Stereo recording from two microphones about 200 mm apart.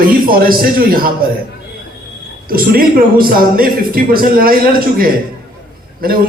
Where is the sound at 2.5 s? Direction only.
45° right (ahead or behind).